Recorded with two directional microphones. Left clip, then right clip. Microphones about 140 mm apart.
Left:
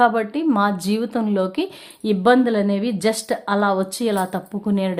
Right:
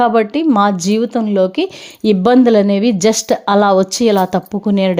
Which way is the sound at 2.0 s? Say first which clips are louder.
Right 5 dB; 45° right (ahead or behind).